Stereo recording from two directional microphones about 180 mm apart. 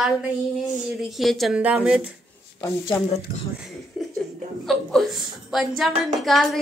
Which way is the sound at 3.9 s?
Centre (ahead or behind).